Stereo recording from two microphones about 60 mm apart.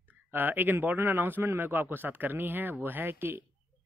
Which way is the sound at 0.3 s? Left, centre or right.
Right.